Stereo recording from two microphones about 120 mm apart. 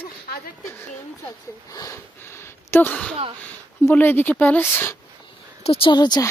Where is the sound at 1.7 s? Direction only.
25° left (ahead or behind).